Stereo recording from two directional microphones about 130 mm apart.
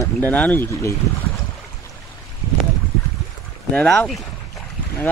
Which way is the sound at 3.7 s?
5° left (ahead or behind).